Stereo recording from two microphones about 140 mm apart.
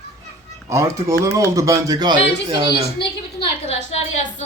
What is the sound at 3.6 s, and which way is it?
Speech, 50° left (ahead or behind).